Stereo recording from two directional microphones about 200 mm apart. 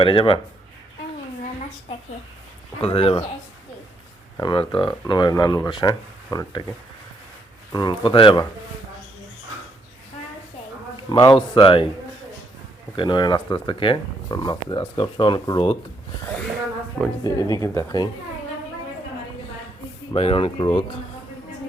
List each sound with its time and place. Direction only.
0.0 s speech: 25° left (ahead or behind)
2.8 s speech: 30° left (ahead or behind)
4.4 s speech: 25° left (ahead or behind)
7.7 s speech: 20° left (ahead or behind)
11.1 s speech: 20° left (ahead or behind)
13.0 s speech: 20° left (ahead or behind)
17.2 s speech: 15° left (ahead or behind)
20.1 s speech: 30° left (ahead or behind)